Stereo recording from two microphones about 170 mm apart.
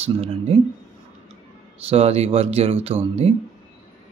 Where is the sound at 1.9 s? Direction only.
35° right (ahead or behind).